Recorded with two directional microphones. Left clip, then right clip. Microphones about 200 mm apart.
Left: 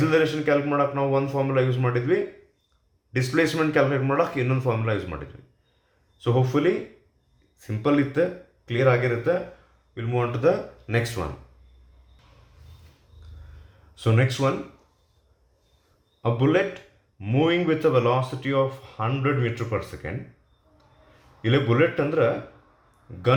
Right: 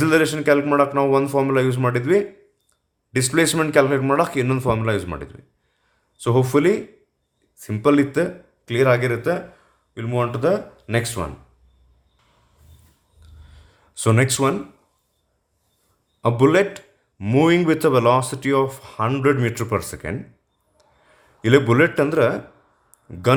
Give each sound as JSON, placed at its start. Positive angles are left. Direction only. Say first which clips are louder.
{"t": 0.0, "sound": "speech", "louder": "right 4 dB", "side_deg": -50}
{"t": 13.9, "sound": "speech", "louder": "right 5 dB", "side_deg": -50}
{"t": 16.2, "sound": "speech", "louder": "right 6 dB", "side_deg": -50}
{"t": 21.4, "sound": "speech", "louder": "right 6 dB", "side_deg": -55}